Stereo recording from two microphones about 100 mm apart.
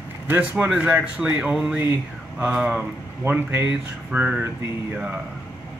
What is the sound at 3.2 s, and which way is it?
Speech, 20° right (ahead or behind).